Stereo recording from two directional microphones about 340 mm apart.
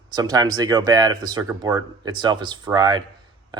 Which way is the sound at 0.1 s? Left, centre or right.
Centre.